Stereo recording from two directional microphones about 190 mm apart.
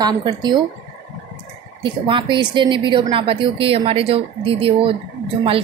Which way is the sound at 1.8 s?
25° right (ahead or behind).